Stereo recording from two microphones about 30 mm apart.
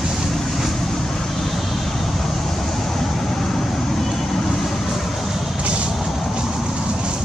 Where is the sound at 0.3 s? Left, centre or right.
Centre.